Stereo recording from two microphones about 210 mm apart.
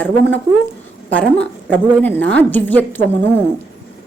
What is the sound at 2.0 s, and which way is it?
A woman's voice, 5° left (ahead or behind).